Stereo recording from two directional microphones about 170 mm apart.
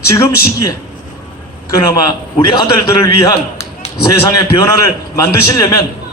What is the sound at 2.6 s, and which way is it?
A man's voice, 20° left (ahead or behind).